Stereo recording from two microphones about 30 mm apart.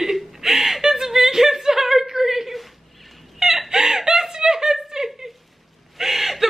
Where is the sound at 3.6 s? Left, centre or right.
Centre.